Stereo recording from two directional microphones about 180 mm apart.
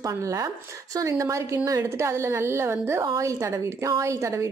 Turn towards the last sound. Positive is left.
turn(degrees=-15)  # may be behind; listen again after turning